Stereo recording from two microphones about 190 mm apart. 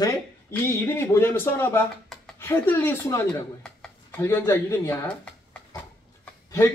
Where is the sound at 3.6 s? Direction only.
5° left (ahead or behind).